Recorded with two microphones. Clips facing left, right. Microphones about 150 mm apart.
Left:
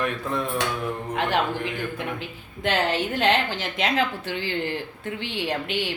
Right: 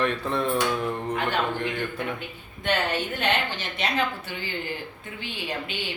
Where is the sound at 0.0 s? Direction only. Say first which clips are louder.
Right 1 dB; 10° left (ahead or behind).